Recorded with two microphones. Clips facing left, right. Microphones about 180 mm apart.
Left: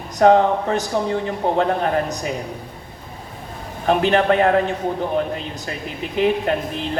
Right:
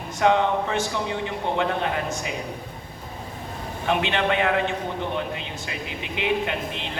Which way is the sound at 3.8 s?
40° left (ahead or behind).